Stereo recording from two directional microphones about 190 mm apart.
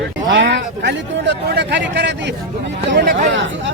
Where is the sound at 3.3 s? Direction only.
80° right.